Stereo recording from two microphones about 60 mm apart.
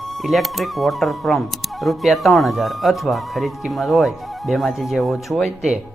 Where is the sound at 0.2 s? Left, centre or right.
Centre.